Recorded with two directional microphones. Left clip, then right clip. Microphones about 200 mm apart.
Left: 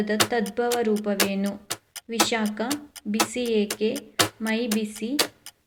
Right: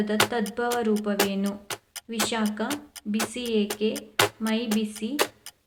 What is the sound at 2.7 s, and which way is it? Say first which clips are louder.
Speech: left 2 dB; centre (ahead or behind).